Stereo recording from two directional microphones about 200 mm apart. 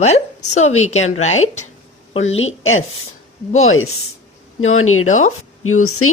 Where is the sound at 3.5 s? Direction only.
90° left.